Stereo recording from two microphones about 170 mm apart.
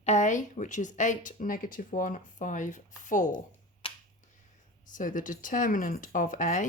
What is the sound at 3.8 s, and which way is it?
Finger snapping, 30° left (ahead or behind).